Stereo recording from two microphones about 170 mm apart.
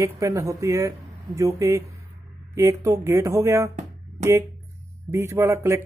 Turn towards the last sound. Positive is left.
turn(degrees=-15)  # may be behind; listen again after turning